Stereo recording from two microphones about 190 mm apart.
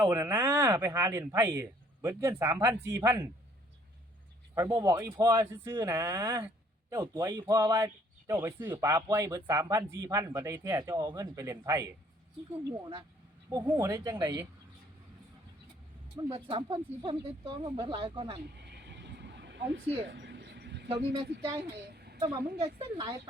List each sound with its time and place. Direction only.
0.0 s speech: 10° right (ahead or behind)
4.5 s speech: 15° right (ahead or behind)
13.5 s speech: 20° right (ahead or behind)
16.1 s speech: 25° right (ahead or behind)
18.5 s vehicle: 60° right (ahead or behind)
20.1 s a sound: 65° right (ahead or behind)
21.8 s a sound: 55° right (ahead or behind)
22.2 s speech: 30° right (ahead or behind)